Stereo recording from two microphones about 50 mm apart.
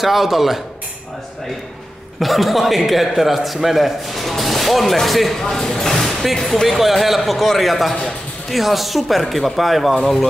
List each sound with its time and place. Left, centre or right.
0.0 s a man's voice: centre
2.1 s a man's voice: centre